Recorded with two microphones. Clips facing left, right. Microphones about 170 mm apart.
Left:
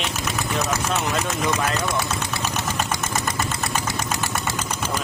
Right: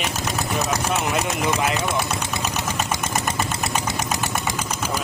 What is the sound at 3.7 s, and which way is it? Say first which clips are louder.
Engine: right 1 dB; 20° right (ahead or behind).